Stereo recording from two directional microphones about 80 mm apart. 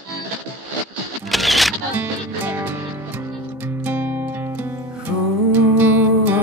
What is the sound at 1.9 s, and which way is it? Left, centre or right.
Music, right.